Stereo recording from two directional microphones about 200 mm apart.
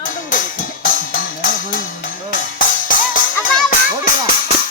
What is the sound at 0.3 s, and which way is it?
Music, 45° left (ahead or behind).